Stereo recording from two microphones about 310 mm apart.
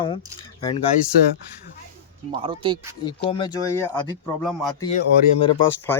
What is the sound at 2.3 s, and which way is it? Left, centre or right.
Speech, centre.